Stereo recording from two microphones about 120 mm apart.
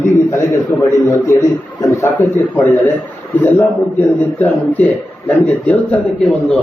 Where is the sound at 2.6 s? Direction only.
15° left (ahead or behind).